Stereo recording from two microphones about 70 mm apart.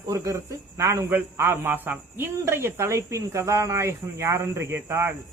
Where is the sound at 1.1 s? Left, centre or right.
Right.